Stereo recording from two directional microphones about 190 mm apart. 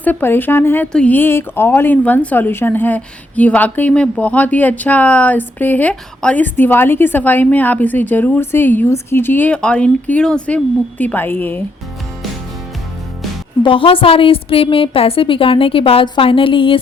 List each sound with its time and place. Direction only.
0.0 s speech: 10° left (ahead or behind)
13.6 s a woman's voice: 30° left (ahead or behind)